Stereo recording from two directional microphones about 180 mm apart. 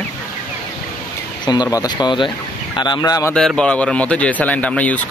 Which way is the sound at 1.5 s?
20° left (ahead or behind).